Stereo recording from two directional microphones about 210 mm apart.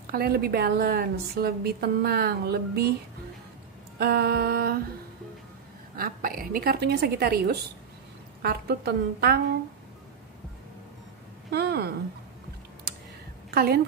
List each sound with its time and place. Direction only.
0.0 s a woman's voice: 45° right (ahead or behind)
4.0 s a woman's voice: 50° right (ahead or behind)
5.9 s a woman's voice: 45° right (ahead or behind)
11.5 s a woman's voice: 50° right (ahead or behind)
13.5 s a woman's voice: 45° right (ahead or behind)